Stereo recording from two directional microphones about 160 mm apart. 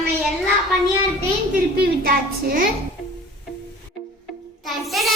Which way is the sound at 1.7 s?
70° right (ahead or behind).